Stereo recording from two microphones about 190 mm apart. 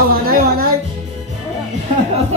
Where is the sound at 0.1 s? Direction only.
50° right (ahead or behind).